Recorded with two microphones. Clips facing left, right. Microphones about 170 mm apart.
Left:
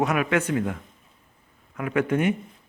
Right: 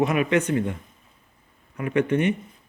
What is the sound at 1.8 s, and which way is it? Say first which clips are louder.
Speech: right 2 dB; 80° left.